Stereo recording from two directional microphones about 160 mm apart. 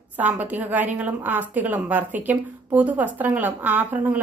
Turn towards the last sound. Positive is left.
turn(degrees=-10)  # may be behind; listen again after turning